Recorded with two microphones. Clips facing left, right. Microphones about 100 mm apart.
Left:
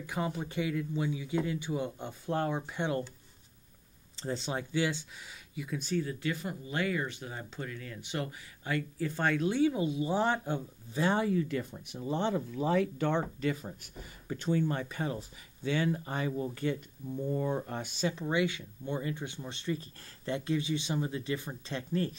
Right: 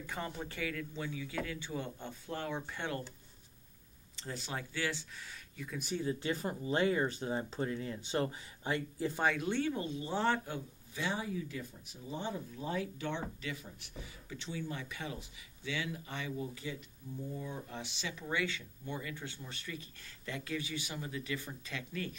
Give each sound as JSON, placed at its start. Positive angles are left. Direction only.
{"t": 0.0, "sound": "speech", "side_deg": 10}
{"t": 2.2, "sound": "speech", "side_deg": 50}
{"t": 2.5, "sound": "speech", "side_deg": 15}
{"t": 4.2, "sound": "speech", "side_deg": 25}
{"t": 5.9, "sound": "speech", "side_deg": -25}
{"t": 9.2, "sound": "speech", "side_deg": 0}
{"t": 9.6, "sound": "speech", "side_deg": 10}
{"t": 11.1, "sound": "speech", "side_deg": 70}
{"t": 16.6, "sound": "speech", "side_deg": 60}
{"t": 18.3, "sound": "speech", "side_deg": 15}
{"t": 18.9, "sound": "speech", "side_deg": 30}